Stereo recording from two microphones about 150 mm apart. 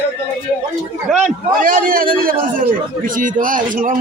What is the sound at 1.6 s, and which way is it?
A man's voice, 65° right (ahead or behind).